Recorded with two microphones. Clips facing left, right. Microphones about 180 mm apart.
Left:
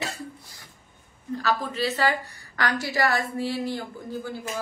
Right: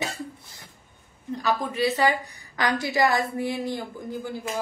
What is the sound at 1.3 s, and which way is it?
A woman's voice, 15° right (ahead or behind).